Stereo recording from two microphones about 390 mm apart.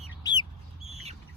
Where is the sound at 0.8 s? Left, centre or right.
Centre.